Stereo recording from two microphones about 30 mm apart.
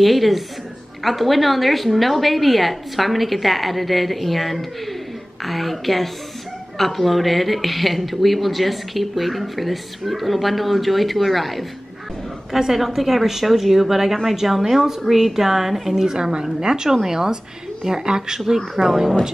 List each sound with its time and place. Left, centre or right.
0.0 s speech: centre
12.7 s a woman's voice: centre
16.2 s a woman's voice: right